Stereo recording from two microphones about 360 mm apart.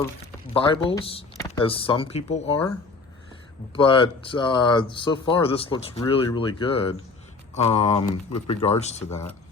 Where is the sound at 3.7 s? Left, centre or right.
Centre.